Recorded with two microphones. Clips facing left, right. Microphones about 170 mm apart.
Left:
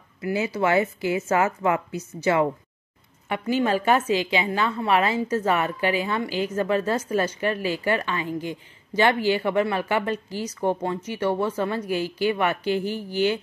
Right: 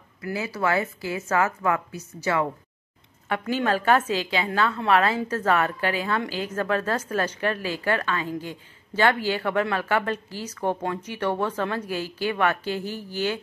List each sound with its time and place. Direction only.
0.2 s speech: 20° left (ahead or behind)
3.3 s a woman's voice: 10° left (ahead or behind)
12.7 s speech: 50° left (ahead or behind)